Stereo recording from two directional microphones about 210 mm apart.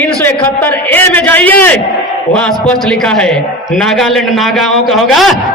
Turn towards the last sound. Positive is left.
turn(degrees=0)  # may be behind; listen again after turning